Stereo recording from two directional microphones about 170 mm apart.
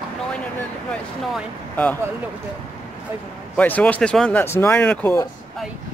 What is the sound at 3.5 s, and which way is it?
Speech, 10° left (ahead or behind).